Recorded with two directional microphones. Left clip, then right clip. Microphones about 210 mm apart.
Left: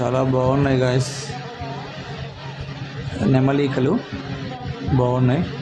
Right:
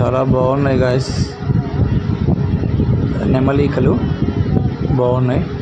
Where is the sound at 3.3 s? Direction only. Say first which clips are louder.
Right 3 dB; 5° right (ahead or behind).